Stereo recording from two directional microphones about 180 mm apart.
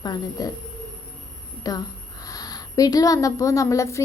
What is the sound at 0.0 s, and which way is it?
Speech, 20° left (ahead or behind).